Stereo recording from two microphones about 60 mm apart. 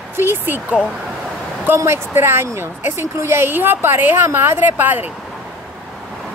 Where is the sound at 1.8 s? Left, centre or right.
Right.